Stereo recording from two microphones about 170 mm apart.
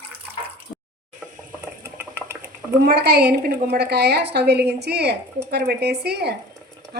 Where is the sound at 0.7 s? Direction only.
40° left (ahead or behind).